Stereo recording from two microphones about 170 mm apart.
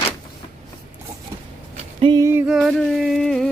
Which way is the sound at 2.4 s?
Centre (ahead or behind).